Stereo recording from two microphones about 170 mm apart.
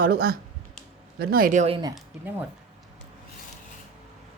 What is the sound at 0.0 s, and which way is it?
Speech, 65° right (ahead or behind).